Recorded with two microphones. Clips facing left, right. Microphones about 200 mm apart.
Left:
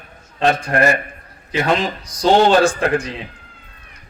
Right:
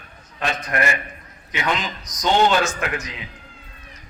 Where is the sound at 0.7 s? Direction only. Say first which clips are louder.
Left 5 dB; 55° left (ahead or behind).